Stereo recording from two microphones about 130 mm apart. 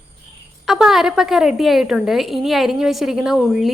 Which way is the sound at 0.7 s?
5° right (ahead or behind).